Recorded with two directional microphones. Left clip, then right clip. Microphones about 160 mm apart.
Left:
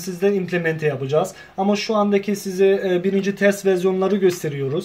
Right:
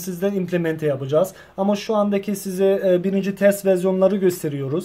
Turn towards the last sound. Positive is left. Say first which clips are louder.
# left 1 dB
turn(degrees=-40)  # may be behind; listen again after turning